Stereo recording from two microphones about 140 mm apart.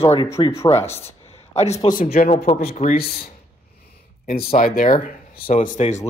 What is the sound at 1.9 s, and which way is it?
Speech, 50° left (ahead or behind).